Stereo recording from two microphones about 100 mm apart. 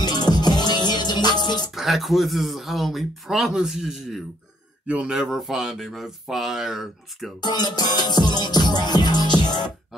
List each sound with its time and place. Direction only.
0.0 s music: 45° left (ahead or behind)
1.8 s speech: centre (ahead or behind)
7.4 s music: 45° left (ahead or behind)